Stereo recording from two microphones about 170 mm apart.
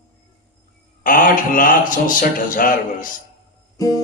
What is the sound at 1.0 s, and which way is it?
Speech, 50° left (ahead or behind).